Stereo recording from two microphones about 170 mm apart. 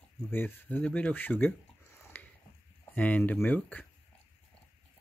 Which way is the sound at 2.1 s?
10° left (ahead or behind).